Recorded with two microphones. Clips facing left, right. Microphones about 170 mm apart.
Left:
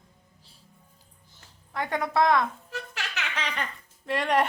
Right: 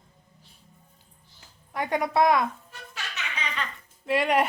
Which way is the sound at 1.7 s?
20° right (ahead or behind).